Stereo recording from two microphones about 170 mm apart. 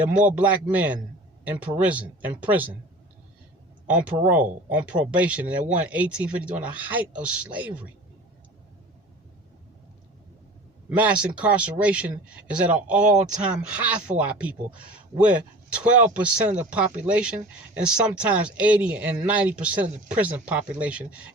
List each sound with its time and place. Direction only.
0.3 s speech: 10° right (ahead or behind)
3.8 s speech: 5° right (ahead or behind)
10.8 s speech: 10° right (ahead or behind)
13.1 s speech: 45° right (ahead or behind)
13.4 s speech: 10° right (ahead or behind)